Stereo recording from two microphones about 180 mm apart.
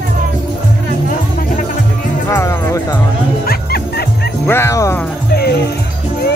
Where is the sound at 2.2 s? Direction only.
15° left (ahead or behind).